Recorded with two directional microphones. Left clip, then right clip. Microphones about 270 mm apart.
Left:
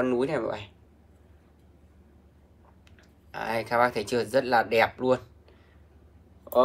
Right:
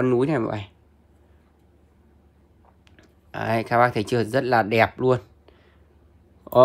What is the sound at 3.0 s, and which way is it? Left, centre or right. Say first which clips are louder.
Speech: right 4 dB; right.